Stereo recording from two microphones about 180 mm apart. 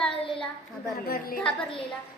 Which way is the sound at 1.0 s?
55° left (ahead or behind).